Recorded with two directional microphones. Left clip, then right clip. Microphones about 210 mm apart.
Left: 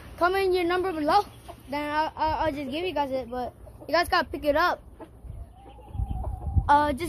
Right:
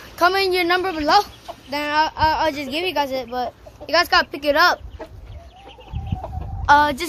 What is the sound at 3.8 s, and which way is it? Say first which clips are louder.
Speech: right 7 dB; 5° left (ahead or behind).